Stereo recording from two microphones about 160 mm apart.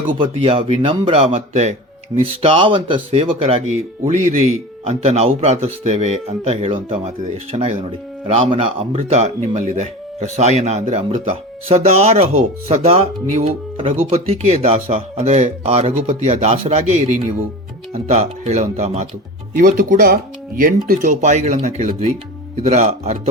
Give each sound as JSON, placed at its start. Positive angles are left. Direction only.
{"t": 0.2, "sound": "speech", "side_deg": -35}